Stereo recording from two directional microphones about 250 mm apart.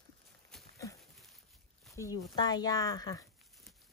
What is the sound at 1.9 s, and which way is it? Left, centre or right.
Speech, centre.